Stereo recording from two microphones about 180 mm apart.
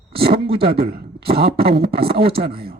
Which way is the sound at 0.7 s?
60° right (ahead or behind).